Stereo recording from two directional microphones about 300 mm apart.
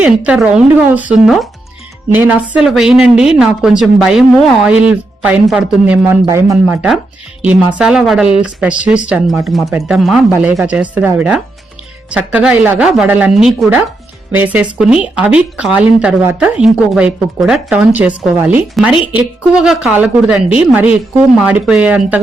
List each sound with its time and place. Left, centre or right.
0.0 s a woman's voice: centre